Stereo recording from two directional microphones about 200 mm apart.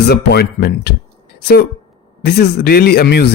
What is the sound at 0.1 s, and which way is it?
A woman's voice, 55° left (ahead or behind).